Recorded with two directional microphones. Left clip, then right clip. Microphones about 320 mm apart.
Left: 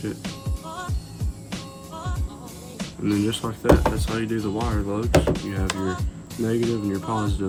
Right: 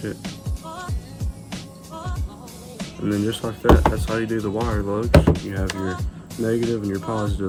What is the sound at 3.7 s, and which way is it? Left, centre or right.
Speech, centre.